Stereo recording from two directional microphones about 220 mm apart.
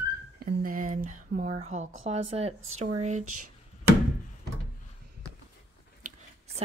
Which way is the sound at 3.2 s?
90° right.